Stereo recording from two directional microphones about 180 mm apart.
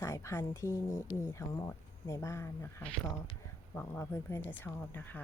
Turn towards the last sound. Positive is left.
turn(degrees=10)  # may be behind; listen again after turning